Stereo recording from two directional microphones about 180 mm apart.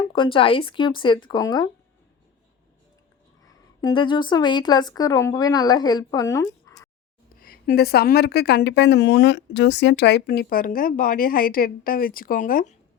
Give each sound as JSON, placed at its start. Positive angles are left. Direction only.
{"t": 0.0, "sound": "speech", "side_deg": 30}
{"t": 3.8, "sound": "speech", "side_deg": 25}
{"t": 7.3, "sound": "speech", "side_deg": 55}